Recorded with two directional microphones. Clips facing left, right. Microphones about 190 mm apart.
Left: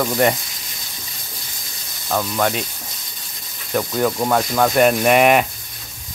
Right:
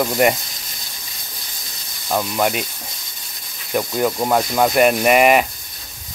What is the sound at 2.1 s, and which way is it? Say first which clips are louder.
Speech: right 1 dB; 10° right (ahead or behind).